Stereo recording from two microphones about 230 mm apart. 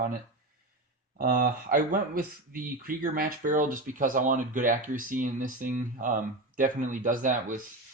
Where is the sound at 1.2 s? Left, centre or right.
Right.